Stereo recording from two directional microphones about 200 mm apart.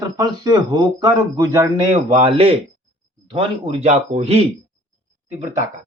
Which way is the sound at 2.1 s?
25° right (ahead or behind).